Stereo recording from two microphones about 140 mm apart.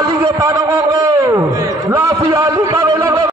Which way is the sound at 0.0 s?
30° right (ahead or behind).